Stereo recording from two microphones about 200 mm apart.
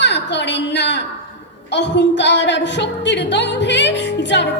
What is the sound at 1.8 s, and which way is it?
Music, 60° left (ahead or behind).